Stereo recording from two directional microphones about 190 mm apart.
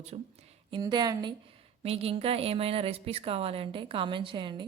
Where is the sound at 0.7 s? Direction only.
20° right (ahead or behind).